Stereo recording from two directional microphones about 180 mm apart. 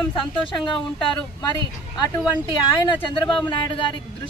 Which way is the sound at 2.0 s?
25° left (ahead or behind).